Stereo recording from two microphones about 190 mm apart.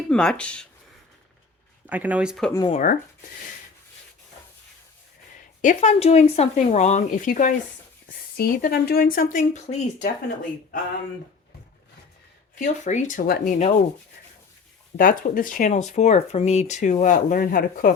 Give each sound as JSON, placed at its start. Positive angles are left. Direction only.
{"t": 0.1, "sound": "speech", "side_deg": 5}
{"t": 1.9, "sound": "speech", "side_deg": -10}
{"t": 2.5, "sound": "speech", "side_deg": 20}
{"t": 2.7, "sound": "speech", "side_deg": 45}
{"t": 5.6, "sound": "speech", "side_deg": 35}
{"t": 12.5, "sound": "speech", "side_deg": 40}
{"t": 14.9, "sound": "speech", "side_deg": 45}